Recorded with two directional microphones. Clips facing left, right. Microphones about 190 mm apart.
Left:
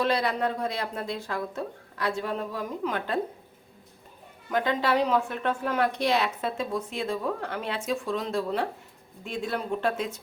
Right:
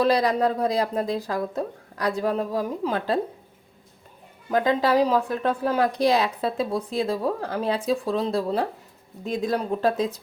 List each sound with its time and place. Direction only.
0.0 s a woman's voice: 35° right (ahead or behind)
4.5 s a woman's voice: 35° right (ahead or behind)